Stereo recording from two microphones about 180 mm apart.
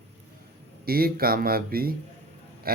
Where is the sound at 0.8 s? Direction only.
55° right (ahead or behind).